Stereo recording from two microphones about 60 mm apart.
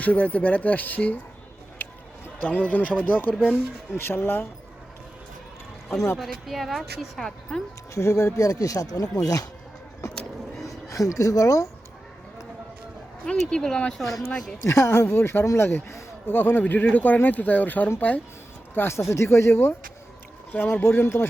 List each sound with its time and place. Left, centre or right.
0.0 s speech: left
1.8 s a sound: left
3.1 s speech: left
3.9 s speech: left
6.1 s a woman's voice: centre
7.5 s speech: centre
7.9 s speech: left
10.6 s speech: left
13.5 s speech: centre
14.6 s speech: left
15.0 s speech: left
16.2 s speech: left
18.9 s speech: left
20.8 s speech: left